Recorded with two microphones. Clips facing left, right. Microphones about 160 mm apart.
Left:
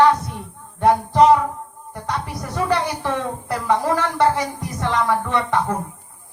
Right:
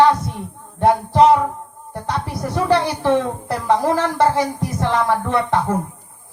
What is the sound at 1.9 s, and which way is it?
Speech, 30° right (ahead or behind).